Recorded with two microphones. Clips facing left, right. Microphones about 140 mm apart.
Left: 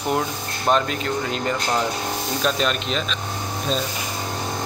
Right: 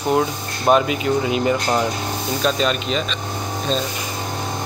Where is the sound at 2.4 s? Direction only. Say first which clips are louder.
Right 3 dB; centre (ahead or behind).